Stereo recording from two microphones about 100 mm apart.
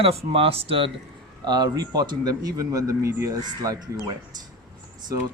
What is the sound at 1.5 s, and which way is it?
Speech, 45° right (ahead or behind).